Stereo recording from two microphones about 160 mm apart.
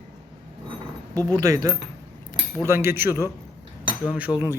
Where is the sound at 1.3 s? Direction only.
20° right (ahead or behind).